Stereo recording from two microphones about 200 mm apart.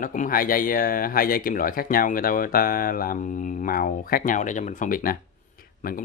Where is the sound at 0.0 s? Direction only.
40° left (ahead or behind).